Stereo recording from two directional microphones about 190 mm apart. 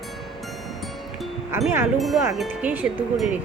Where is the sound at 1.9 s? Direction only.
Centre (ahead or behind).